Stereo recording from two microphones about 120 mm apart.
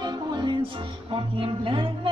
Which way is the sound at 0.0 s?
35° right (ahead or behind).